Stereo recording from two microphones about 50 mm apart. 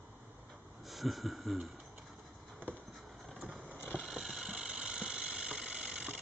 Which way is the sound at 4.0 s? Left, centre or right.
Centre.